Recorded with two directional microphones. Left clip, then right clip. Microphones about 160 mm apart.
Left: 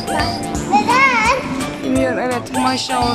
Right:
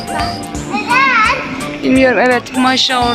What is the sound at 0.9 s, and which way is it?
Children playing, 45° left (ahead or behind).